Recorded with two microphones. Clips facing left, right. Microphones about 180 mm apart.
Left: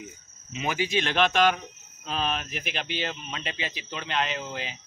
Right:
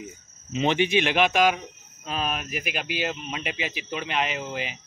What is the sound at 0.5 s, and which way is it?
Speech, 30° right (ahead or behind).